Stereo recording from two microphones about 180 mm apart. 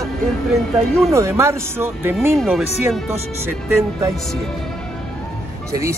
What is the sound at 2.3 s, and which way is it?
Speech, centre (ahead or behind).